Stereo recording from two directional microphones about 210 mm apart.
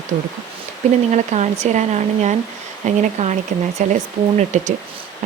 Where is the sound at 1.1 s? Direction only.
35° right (ahead or behind).